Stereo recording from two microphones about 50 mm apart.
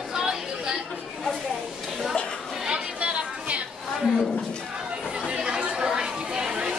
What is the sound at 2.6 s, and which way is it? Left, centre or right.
Chatter, right.